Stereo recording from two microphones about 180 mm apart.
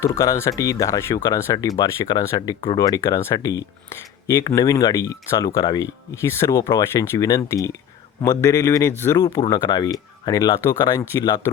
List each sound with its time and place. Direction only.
0.0 s speech: 15° left (ahead or behind)
9.4 s speech: 25° left (ahead or behind)